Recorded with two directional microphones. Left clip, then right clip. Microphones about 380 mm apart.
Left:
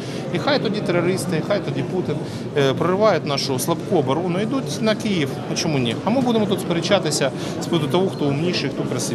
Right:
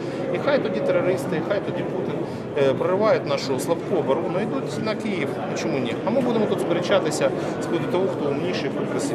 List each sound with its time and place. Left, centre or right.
0.5 s speech: left